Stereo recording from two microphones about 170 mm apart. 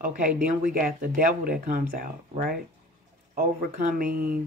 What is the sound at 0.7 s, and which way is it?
Speech, 60° right (ahead or behind).